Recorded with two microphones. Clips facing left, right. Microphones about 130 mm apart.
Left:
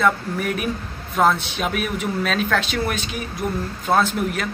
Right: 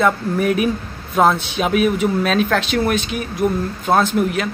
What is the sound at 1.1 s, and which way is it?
Speech, 25° right (ahead or behind).